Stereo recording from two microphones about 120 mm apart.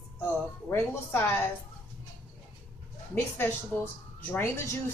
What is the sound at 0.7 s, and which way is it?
Speech, 20° left (ahead or behind).